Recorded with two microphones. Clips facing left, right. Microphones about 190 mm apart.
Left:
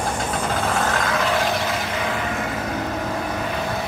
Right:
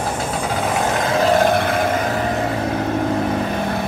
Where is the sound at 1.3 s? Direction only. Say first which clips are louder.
Right 7 dB; 50° right (ahead or behind).